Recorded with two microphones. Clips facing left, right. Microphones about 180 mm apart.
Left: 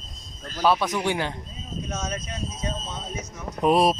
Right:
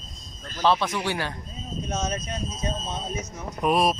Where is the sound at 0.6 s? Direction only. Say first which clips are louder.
Left 1 dB; 15° left (ahead or behind).